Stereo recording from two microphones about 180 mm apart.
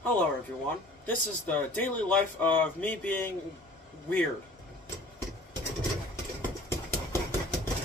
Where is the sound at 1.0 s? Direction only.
10° left (ahead or behind).